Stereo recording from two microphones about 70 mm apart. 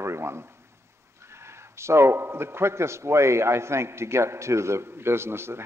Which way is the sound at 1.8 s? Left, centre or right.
Right.